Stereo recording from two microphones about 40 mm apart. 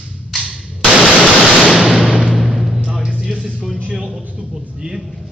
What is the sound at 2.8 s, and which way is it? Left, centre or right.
Music, right.